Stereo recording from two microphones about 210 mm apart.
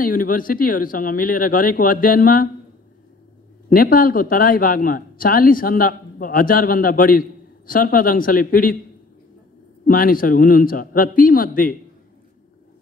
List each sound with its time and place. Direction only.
0.0 s speech: 40° left (ahead or behind)
3.6 s a man's voice: 40° left (ahead or behind)
9.8 s a man's voice: 45° left (ahead or behind)